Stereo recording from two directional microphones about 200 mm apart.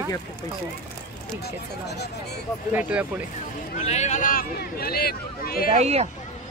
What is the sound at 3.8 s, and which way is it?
A man's voice, 35° left (ahead or behind).